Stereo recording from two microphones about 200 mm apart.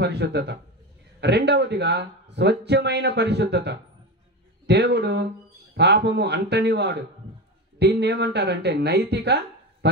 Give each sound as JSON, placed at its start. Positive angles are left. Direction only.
{"t": 0.0, "sound": "speech", "side_deg": -55}